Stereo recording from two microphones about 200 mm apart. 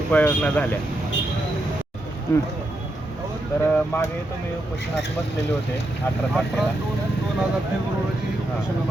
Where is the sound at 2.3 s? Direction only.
15° left (ahead or behind).